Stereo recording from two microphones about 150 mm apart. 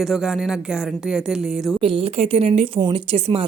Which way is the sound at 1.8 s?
40° right (ahead or behind).